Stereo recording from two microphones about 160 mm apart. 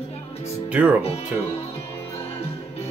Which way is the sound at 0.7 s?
10° right (ahead or behind).